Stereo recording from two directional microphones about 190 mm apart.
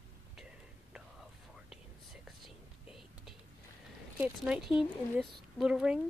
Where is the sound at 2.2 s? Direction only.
Centre (ahead or behind).